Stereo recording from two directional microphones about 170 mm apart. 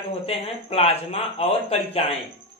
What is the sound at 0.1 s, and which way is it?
Speech, 35° left (ahead or behind).